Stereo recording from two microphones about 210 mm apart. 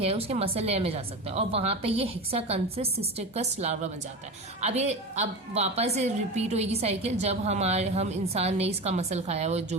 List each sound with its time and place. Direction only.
0.0 s a woman's voice: 30° right (ahead or behind)